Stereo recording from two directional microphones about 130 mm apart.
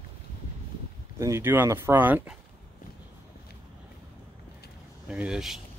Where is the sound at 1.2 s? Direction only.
20° right (ahead or behind).